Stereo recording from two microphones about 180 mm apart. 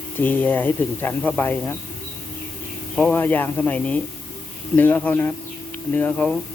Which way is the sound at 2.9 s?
10° left (ahead or behind).